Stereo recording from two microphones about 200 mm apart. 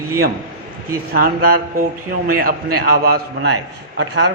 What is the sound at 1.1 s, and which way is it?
A man's voice, 50° right (ahead or behind).